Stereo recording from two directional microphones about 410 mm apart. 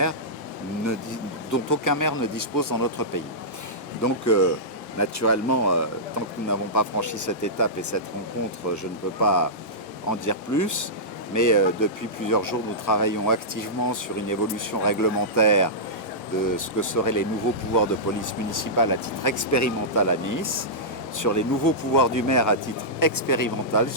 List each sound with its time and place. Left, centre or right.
1.5 s speech: left